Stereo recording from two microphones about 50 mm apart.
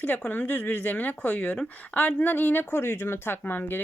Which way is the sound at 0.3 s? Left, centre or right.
Left.